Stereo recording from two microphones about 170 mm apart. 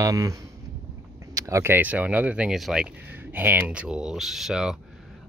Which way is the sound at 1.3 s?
20° right (ahead or behind).